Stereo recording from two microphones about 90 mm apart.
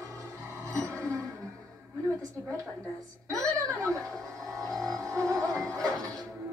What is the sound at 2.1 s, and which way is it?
A woman's voice, 35° right (ahead or behind).